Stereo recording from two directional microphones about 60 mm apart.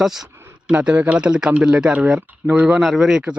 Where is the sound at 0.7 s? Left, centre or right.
Right.